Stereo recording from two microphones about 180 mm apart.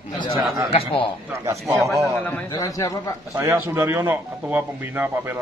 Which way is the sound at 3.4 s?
15° right (ahead or behind).